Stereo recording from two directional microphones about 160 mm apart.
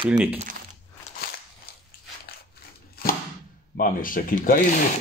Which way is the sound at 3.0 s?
70° left (ahead or behind).